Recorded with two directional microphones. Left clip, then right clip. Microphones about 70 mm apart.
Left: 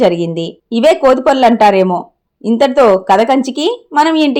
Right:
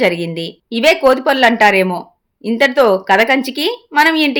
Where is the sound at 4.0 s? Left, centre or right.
Left.